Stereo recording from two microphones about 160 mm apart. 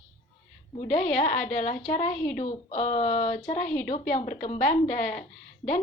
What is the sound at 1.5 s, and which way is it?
A woman's voice, 45° left (ahead or behind).